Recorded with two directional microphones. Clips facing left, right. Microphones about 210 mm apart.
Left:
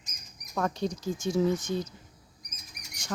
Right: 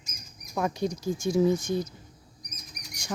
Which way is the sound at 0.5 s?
10° right (ahead or behind).